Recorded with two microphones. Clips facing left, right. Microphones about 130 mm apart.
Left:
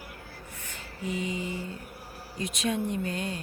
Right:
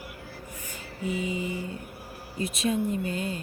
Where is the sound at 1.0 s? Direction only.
5° right (ahead or behind).